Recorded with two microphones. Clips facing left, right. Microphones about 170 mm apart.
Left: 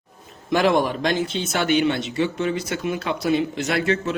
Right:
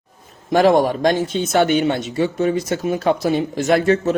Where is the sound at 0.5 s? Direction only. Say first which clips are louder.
Right 5 dB; 40° right (ahead or behind).